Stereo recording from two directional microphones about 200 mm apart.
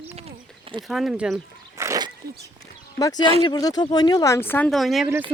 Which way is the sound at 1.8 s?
20° right (ahead or behind).